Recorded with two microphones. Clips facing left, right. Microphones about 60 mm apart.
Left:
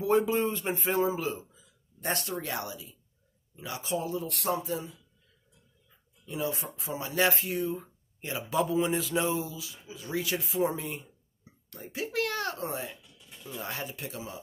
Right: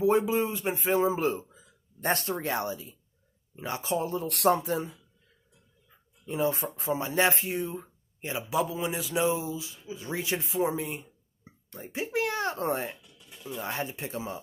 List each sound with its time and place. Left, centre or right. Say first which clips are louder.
0.2 s speech: even; centre
1.2 s a sound: right 5 dB; right
2.3 s speech: right 4 dB; right
6.2 s speech: right 5 dB; right
7.8 s a sound: right 2 dB; right
8.5 s mantra: left 3 dB; centre
9.5 s speech: right 6 dB; right
10.6 s mantra: right 1 dB; centre
11.4 s a sound: right 2 dB; right
12.5 s speech: right 5 dB; right
13.0 s a sound: right 3 dB; centre
13.7 s speech: right 4 dB; right